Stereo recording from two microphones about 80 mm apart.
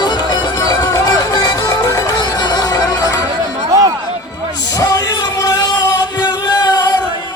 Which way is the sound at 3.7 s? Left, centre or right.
Right.